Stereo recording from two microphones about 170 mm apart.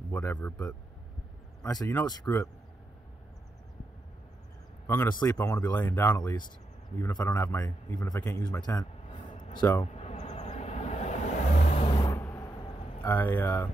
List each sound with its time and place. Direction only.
0.1 s a man's voice: 10° left (ahead or behind)
4.8 s a man's voice: 15° left (ahead or behind)
9.9 s vehicle: 40° left (ahead or behind)
12.2 s vehicle: 15° left (ahead or behind)
13.0 s a man's voice: 15° left (ahead or behind)